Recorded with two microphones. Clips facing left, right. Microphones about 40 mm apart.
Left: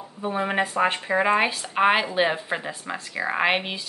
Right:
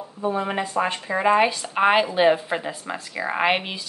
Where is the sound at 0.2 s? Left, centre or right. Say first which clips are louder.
Even; left.